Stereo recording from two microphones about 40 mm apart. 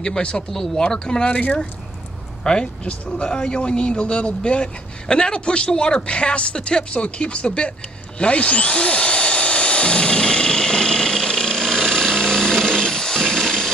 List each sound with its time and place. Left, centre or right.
0.0 s speech: left
0.5 s speech: centre
1.3 s speech: left
2.4 s speech: left
8.2 s drill: left